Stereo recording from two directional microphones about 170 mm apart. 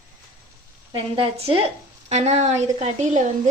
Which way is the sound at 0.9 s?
30° right (ahead or behind).